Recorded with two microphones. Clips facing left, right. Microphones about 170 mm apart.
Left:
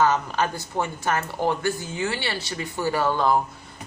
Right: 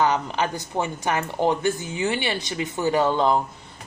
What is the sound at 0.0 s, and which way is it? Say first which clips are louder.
Speech: even; 15° right (ahead or behind).